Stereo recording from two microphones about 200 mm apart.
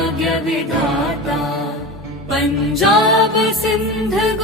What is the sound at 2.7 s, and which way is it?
A man's voice, centre (ahead or behind).